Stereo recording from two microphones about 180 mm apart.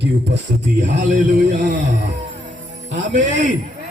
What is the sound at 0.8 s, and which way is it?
Speech, 45° right (ahead or behind).